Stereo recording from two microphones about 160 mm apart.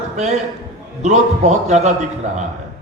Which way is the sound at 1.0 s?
45° right (ahead or behind).